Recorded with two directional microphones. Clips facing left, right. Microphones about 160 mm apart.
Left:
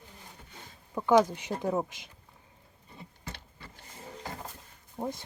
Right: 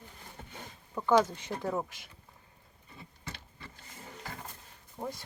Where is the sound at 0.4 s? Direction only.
55° right (ahead or behind).